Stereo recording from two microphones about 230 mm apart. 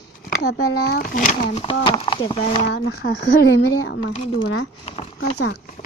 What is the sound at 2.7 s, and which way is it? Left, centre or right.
Speech, left.